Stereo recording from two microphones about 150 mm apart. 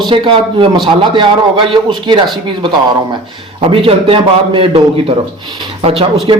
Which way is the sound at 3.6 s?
35° right (ahead or behind).